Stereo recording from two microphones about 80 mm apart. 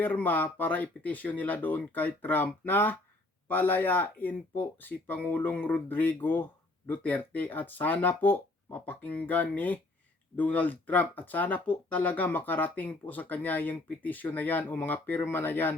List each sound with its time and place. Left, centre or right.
0.0 s speech: left